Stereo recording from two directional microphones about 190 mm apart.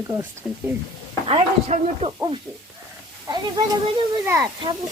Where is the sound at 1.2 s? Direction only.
30° right (ahead or behind).